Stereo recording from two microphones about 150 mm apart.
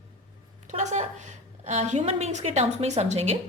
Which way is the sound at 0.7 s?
50° right (ahead or behind).